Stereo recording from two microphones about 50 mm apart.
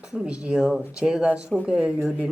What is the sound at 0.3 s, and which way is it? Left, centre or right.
Speech, right.